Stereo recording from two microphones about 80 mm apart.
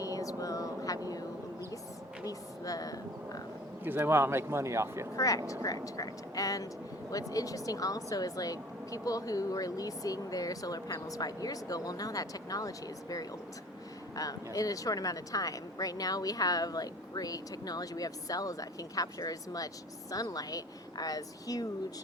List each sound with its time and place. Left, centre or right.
0.0 s a sound: left
2.2 s speech: left
3.8 s a man's voice: right
5.1 s speech: left